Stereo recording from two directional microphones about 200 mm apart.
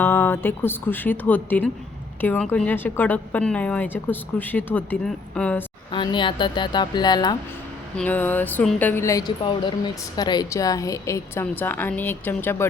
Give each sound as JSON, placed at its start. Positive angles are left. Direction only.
{"t": 0.0, "sound": "speech", "side_deg": 10}
{"t": 5.9, "sound": "speech", "side_deg": 25}
{"t": 7.9, "sound": "speech", "side_deg": 10}